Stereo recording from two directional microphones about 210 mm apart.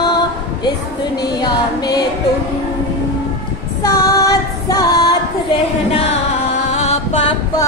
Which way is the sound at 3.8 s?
15° left (ahead or behind).